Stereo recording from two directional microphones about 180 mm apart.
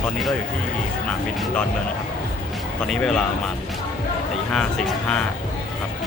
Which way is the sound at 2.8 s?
5° left (ahead or behind).